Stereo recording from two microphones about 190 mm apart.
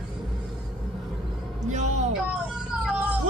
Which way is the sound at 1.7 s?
40° right (ahead or behind).